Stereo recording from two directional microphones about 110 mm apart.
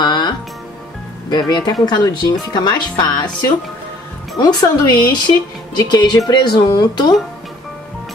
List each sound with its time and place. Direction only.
0.0 s music: 40° left (ahead or behind)
1.3 s speech: 40° left (ahead or behind)